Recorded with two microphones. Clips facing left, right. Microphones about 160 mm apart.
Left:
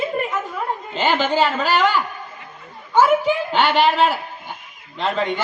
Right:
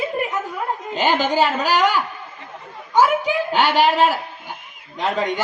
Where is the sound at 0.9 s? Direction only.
10° right (ahead or behind).